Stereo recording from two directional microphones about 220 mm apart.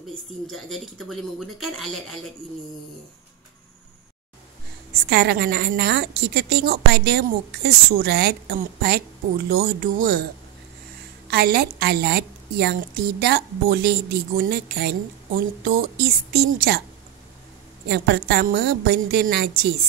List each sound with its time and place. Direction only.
0.5 s speech: centre (ahead or behind)
5.1 s a woman's voice: 45° right (ahead or behind)
11.2 s a woman's voice: 45° right (ahead or behind)
17.8 s a woman's voice: 45° right (ahead or behind)